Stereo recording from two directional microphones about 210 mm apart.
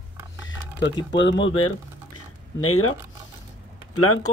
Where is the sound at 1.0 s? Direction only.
60° left (ahead or behind); by 1.7 s 75° left (ahead or behind).